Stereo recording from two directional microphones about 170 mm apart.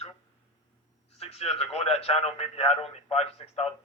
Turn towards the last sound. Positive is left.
turn(degrees=35)  # may be behind; listen again after turning